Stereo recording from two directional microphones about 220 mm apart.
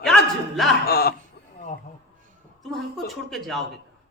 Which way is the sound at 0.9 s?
45° left (ahead or behind).